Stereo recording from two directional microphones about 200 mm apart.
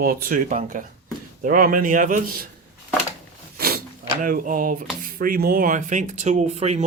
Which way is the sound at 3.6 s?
50° right (ahead or behind).